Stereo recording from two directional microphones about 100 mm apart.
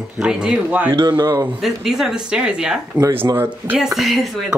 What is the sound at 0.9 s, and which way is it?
Speech, 45° right (ahead or behind).